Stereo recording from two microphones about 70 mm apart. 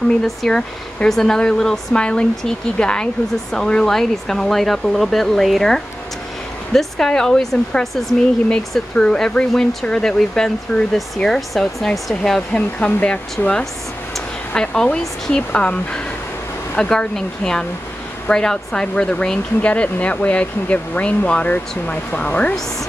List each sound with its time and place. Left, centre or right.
0.2 s speech: centre